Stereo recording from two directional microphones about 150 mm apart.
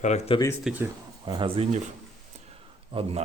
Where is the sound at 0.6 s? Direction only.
10° right (ahead or behind).